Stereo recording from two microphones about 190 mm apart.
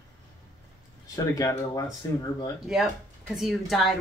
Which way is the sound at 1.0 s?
20° left (ahead or behind).